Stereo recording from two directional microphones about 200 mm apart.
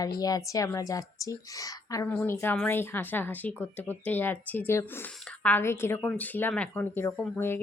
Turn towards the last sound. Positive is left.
turn(degrees=10)  # may be behind; listen again after turning